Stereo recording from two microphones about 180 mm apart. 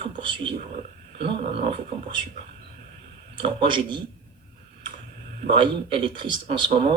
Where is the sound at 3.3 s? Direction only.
30° right (ahead or behind).